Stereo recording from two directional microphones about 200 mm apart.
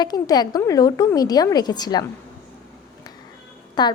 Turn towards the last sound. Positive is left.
turn(degrees=20)  # may be behind; listen again after turning